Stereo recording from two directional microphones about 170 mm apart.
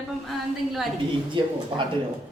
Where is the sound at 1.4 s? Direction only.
30° right (ahead or behind).